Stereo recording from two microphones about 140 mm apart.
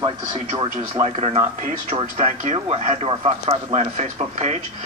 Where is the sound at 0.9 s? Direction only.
50° right (ahead or behind).